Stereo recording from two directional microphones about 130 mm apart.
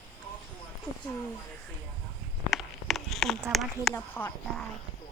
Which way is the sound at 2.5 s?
Centre (ahead or behind).